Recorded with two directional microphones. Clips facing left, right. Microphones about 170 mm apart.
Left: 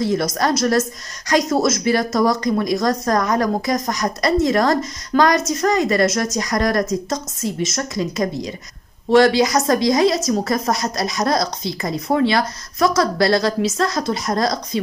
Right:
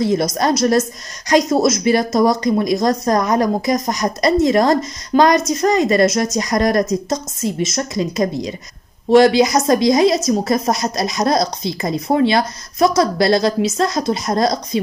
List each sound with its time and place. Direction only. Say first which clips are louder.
0.0 s a woman's voice: right 2 dB; 20° right (ahead or behind)